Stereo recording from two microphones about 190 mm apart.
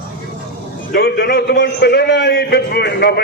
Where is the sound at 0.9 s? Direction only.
55° left (ahead or behind).